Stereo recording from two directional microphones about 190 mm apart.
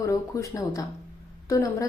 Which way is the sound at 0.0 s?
15° left (ahead or behind).